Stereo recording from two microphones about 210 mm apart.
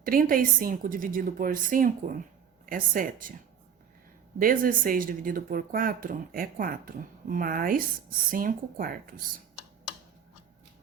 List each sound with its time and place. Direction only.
0.0 s speech: 40° right (ahead or behind)
4.4 s speech: 40° right (ahead or behind)